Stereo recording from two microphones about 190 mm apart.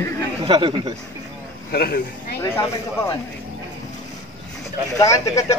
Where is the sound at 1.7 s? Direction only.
55° left (ahead or behind).